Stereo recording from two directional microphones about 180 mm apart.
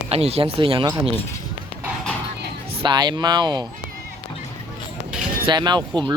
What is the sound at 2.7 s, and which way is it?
Speech, 25° right (ahead or behind).